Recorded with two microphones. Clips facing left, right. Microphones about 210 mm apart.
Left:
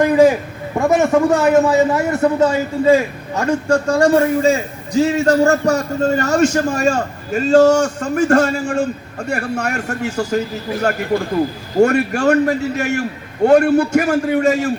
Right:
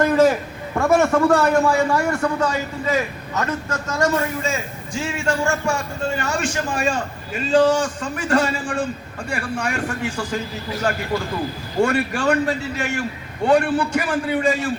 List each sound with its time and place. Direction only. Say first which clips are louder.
0.0 s a man's voice: left 4 dB; 15° left (ahead or behind); by 14.7 s 45° left (ahead or behind)